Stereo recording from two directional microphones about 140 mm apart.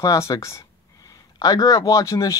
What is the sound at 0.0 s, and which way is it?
Speech, 25° left (ahead or behind).